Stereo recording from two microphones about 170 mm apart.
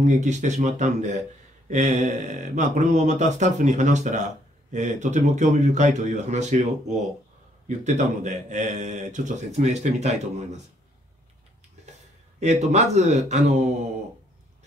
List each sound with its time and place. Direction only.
0.0 s a man's voice: 45° right (ahead or behind)
12.4 s speech: 40° right (ahead or behind)